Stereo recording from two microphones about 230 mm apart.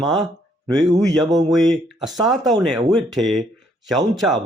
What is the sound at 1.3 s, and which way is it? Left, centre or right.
Speech, centre.